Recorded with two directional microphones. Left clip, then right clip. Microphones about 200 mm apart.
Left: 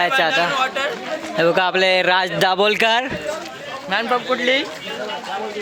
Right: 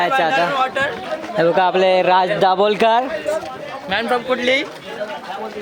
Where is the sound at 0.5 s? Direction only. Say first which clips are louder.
Right 2 dB; 50° right (ahead or behind).